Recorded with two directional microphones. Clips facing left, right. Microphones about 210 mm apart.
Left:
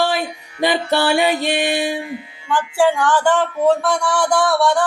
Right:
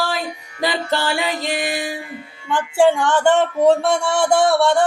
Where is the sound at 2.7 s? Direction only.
25° right (ahead or behind).